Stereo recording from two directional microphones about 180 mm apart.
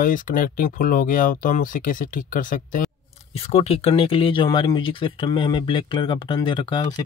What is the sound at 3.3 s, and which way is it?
Speech, 35° left (ahead or behind).